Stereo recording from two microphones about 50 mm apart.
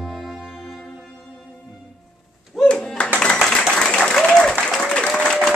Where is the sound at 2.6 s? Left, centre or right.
Centre.